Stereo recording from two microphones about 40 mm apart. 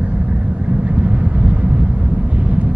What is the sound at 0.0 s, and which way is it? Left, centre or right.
Vehicle, right.